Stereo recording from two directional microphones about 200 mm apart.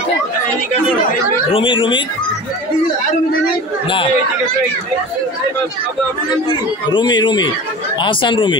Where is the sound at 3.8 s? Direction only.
25° left (ahead or behind).